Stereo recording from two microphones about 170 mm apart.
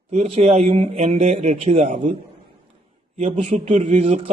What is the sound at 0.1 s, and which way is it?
A man's voice, 40° right (ahead or behind).